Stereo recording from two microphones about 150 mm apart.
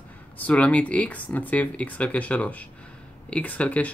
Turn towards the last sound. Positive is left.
turn(degrees=10)  # may be behind; listen again after turning